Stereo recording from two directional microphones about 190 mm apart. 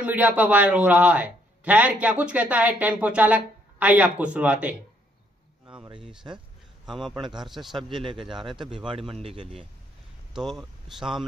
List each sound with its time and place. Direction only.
0.0 s a man's voice: 5° right (ahead or behind)
6.9 s speech: centre (ahead or behind)
7.9 s speech: 25° right (ahead or behind)
10.3 s speech: centre (ahead or behind)